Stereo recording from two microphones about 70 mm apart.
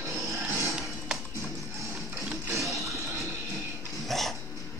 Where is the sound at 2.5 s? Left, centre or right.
Right.